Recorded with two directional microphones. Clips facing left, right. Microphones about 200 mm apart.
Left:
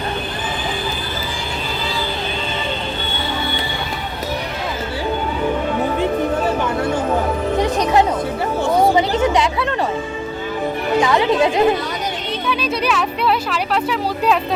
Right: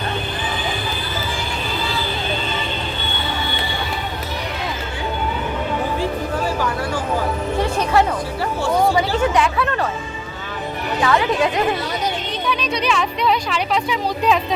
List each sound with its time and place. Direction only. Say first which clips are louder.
6.0 s music: left 4 dB; 25° left (ahead or behind)
8.6 s a sound: left 2 dB; 20° left (ahead or behind)
11.0 s speech: left 1 dB; 20° left (ahead or behind)
12.5 s speech: left 1 dB; 5° left (ahead or behind)